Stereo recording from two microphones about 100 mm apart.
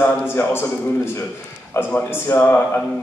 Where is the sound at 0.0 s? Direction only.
25° left (ahead or behind).